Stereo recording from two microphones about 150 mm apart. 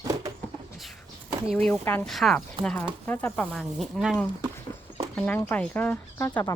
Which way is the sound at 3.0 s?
10° left (ahead or behind).